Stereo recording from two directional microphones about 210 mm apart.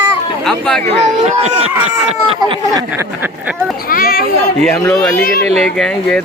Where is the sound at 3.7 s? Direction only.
45° left (ahead or behind).